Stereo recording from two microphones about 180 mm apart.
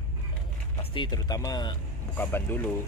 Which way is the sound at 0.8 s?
25° left (ahead or behind).